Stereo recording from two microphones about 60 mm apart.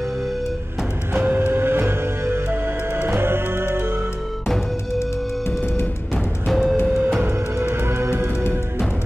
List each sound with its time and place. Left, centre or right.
1.2 s music: right
6.1 s music: centre
7.2 s music: right